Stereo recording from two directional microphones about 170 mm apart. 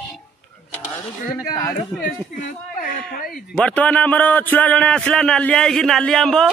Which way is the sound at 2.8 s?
55° left (ahead or behind).